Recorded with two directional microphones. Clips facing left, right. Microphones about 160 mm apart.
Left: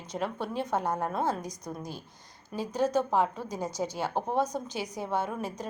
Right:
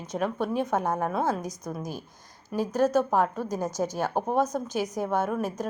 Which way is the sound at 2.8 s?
15° left (ahead or behind).